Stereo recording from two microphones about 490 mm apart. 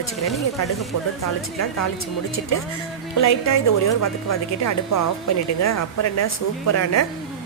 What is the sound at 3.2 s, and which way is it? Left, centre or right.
A woman's voice, left.